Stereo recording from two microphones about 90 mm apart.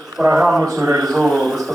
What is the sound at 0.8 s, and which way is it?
Speech, 40° right (ahead or behind).